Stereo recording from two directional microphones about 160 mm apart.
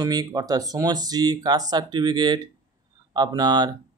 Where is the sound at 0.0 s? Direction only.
25° right (ahead or behind).